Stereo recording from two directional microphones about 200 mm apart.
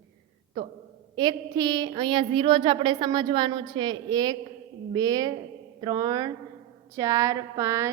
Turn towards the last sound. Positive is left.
turn(degrees=-15)  # may be behind; listen again after turning